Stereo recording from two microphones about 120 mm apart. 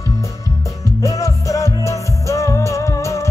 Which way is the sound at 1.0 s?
25° left (ahead or behind).